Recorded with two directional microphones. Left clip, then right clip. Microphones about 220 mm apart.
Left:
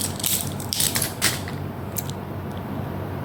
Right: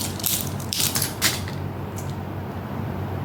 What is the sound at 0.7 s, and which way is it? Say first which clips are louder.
Crushing: even; 5° left (ahead or behind).